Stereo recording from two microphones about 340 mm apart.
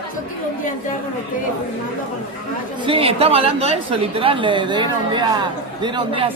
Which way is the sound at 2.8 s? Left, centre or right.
Centre.